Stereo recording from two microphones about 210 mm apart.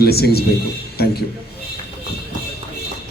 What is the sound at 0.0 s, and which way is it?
A woman's voice, 50° left (ahead or behind).